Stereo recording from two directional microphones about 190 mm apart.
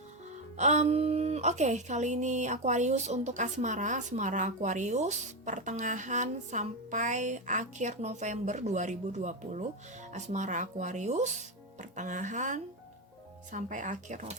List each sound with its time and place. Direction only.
0.5 s a woman's voice: 40° right (ahead or behind)